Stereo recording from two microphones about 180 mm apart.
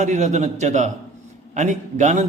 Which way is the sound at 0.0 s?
40° right (ahead or behind).